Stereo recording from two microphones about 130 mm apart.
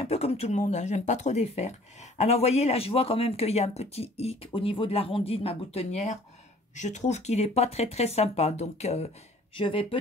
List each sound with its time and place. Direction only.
0.0 s speech: 55° left (ahead or behind)
9.6 s speech: 45° left (ahead or behind)